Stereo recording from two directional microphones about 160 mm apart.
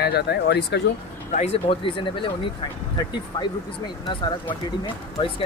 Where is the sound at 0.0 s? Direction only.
90° left.